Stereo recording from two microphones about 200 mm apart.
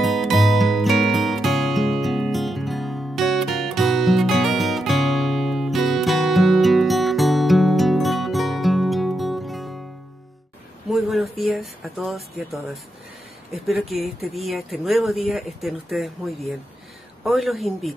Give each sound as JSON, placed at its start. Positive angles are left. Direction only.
{"t": 0.0, "sound": "music", "side_deg": 0}
{"t": 10.9, "sound": "a sound", "side_deg": 0}
{"t": 11.4, "sound": "speech", "side_deg": 0}